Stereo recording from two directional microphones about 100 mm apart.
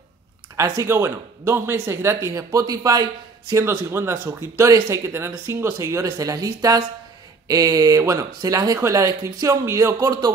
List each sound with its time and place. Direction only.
0.6 s speech: 30° right (ahead or behind)